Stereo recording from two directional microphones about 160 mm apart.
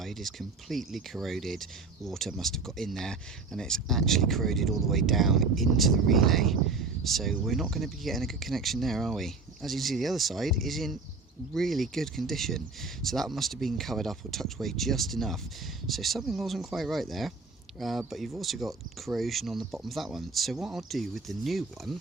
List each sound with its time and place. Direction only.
0.0 s speech: centre (ahead or behind)